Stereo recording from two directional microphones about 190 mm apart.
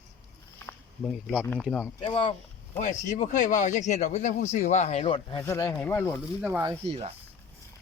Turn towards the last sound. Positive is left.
turn(degrees=-30)  # may be behind; listen again after turning